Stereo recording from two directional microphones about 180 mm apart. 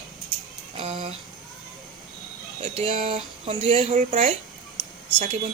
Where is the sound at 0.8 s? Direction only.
35° right (ahead or behind).